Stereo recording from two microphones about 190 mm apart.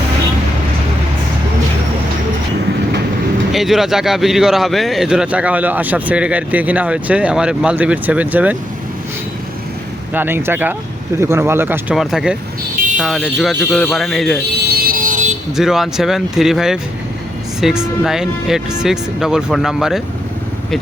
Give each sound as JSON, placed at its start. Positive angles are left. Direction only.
{"t": 3.5, "sound": "speech", "side_deg": 0}
{"t": 10.2, "sound": "speech", "side_deg": -10}
{"t": 14.7, "sound": "vehicle", "side_deg": -50}
{"t": 15.5, "sound": "speech", "side_deg": 0}